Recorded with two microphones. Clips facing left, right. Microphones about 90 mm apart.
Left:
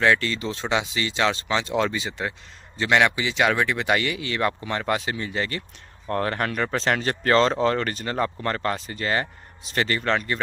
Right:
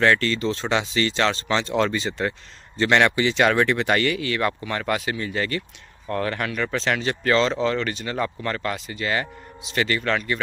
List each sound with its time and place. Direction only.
0.0 s speech: 10° left (ahead or behind); by 10.4 s 30° left (ahead or behind)